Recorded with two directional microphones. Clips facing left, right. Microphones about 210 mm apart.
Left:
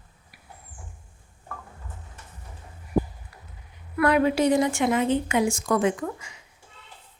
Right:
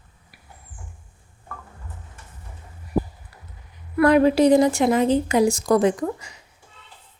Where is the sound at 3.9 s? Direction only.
35° right (ahead or behind).